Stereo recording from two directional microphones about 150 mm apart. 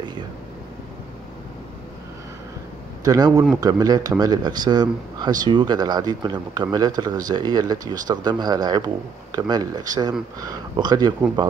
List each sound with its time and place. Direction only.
3.0 s speech: 25° right (ahead or behind)